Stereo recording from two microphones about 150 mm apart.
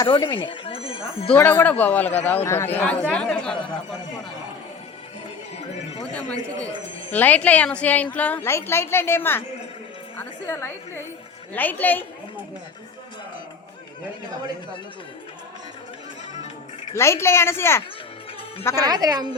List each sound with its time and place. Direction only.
0.0 s speech: 30° left (ahead or behind)
1.5 s speech: 10° left (ahead or behind)
7.1 s speech: 10° left (ahead or behind)
16.9 s speech: 20° left (ahead or behind)
18.9 s a woman's voice: 25° right (ahead or behind)